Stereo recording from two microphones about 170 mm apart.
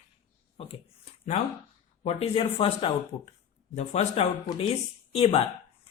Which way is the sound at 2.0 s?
35° left (ahead or behind).